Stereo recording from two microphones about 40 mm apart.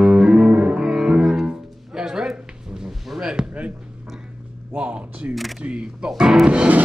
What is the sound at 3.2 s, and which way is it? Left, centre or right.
Basketball bounce, right.